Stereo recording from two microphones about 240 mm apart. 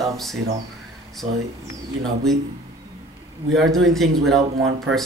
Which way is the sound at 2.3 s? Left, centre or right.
Centre.